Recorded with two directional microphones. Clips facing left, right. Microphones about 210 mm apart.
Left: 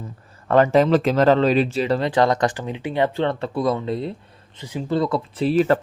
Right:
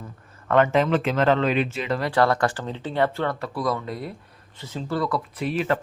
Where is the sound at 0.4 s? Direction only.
35° left (ahead or behind).